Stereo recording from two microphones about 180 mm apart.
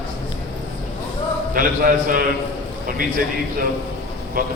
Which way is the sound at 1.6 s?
50° right (ahead or behind).